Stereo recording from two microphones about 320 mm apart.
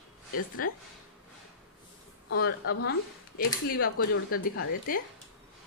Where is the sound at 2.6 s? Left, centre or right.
Left.